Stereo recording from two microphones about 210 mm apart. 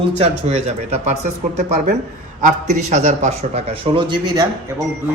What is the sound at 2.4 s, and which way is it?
A man's voice, 35° right (ahead or behind).